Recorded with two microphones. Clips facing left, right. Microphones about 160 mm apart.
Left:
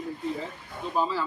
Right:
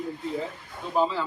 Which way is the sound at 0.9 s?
20° right (ahead or behind).